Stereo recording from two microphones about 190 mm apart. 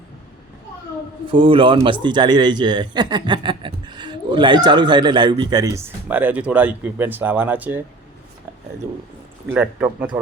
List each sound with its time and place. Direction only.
1.3 s a man's voice: 25° right (ahead or behind); by 7.8 s 10° right (ahead or behind)
9.5 s speech: 10° right (ahead or behind)